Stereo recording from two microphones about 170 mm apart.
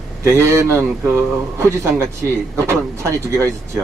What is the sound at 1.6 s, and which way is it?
Speech, 15° right (ahead or behind).